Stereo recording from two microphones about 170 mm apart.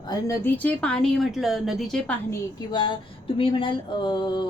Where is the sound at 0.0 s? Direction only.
25° left (ahead or behind).